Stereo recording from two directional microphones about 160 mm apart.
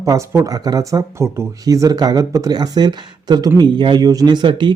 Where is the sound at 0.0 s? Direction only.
20° right (ahead or behind).